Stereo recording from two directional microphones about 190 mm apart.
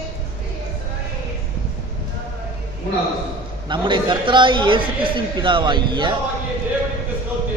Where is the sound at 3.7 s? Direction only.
25° right (ahead or behind).